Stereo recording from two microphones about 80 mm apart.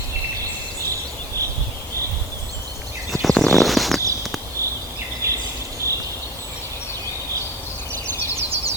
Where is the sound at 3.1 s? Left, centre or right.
Centre.